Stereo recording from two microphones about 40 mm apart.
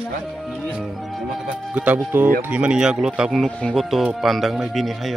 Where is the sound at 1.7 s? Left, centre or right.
Right.